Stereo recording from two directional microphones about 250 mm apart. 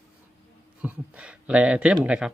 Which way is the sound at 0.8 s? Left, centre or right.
Centre.